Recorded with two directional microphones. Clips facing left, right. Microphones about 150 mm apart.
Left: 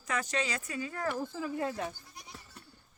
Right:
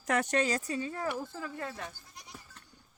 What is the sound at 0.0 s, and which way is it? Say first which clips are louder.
Speech: right 5 dB; 65° right (ahead or behind).